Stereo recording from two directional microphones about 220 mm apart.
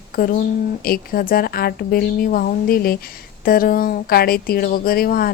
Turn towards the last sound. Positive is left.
turn(degrees=45)  # may be behind; listen again after turning